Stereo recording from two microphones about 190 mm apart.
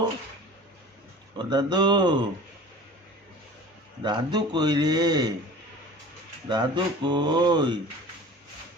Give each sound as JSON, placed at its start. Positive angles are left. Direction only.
{"t": 1.4, "sound": "speech", "side_deg": -25}
{"t": 4.0, "sound": "speech", "side_deg": -20}
{"t": 6.5, "sound": "speech", "side_deg": -25}